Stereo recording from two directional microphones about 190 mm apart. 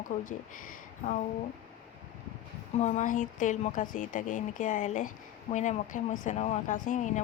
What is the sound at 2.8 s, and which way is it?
Speech, 40° left (ahead or behind).